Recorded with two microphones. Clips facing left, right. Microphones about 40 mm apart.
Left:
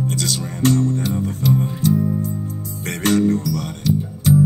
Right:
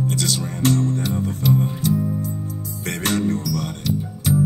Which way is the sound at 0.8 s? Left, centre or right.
Right.